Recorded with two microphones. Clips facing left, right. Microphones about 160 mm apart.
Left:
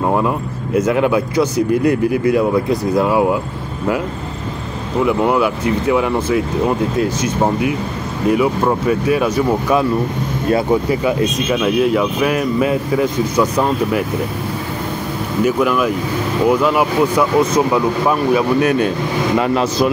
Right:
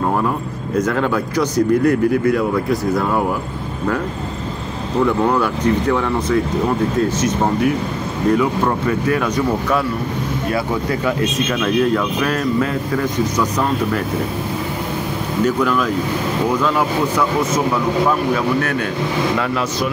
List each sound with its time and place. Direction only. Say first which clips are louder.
0.7 s speech: left 4 dB; 10° left (ahead or behind)
5.0 s speech: left 2 dB; 10° left (ahead or behind)
10.9 s speech: left 3 dB; 15° left (ahead or behind)
15.4 s speech: left 2 dB; 10° left (ahead or behind)
18.3 s speech: left 4 dB; 20° left (ahead or behind)